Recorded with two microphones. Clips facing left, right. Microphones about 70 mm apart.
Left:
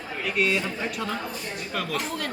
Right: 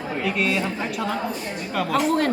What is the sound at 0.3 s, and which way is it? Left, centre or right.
Speech, centre.